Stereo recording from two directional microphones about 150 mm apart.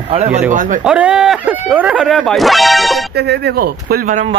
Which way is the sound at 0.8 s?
5° right (ahead or behind).